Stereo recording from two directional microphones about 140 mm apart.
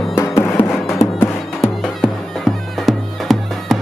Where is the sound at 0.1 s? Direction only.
20° left (ahead or behind).